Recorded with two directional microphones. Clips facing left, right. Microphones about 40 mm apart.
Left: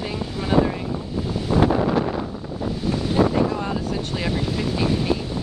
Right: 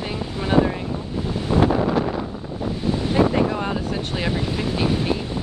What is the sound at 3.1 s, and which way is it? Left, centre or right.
Speech, right.